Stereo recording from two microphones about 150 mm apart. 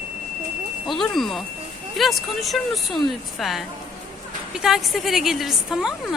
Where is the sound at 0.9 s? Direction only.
Centre (ahead or behind).